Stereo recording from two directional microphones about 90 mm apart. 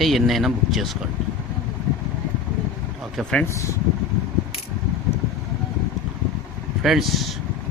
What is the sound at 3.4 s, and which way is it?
Speech, 35° left (ahead or behind).